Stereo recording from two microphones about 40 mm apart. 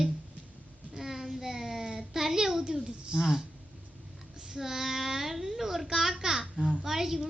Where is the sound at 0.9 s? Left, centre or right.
Centre.